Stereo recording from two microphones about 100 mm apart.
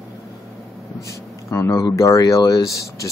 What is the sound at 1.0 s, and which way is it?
Speech, 30° left (ahead or behind).